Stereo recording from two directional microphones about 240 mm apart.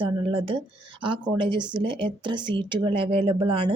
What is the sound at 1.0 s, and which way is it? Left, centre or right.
Speech, centre.